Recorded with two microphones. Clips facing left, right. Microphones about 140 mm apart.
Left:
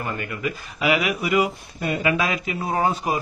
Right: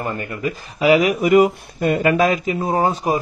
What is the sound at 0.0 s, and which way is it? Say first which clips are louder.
Speech: right 4 dB; 35° right (ahead or behind).